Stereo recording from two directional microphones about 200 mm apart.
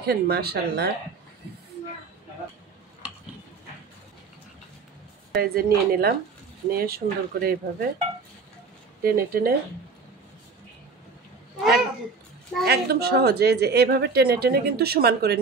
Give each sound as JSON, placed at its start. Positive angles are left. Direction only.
{"t": 0.0, "sound": "a woman's voice", "side_deg": -50}
{"t": 5.3, "sound": "a woman's voice", "side_deg": -50}
{"t": 9.0, "sound": "a woman's voice", "side_deg": -50}
{"t": 12.6, "sound": "a woman's voice", "side_deg": -50}